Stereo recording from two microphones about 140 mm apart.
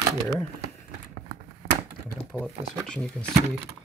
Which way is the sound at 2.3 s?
5° left (ahead or behind).